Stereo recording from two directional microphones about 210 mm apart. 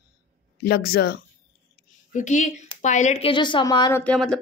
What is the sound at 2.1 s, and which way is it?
Speech, 35° left (ahead or behind).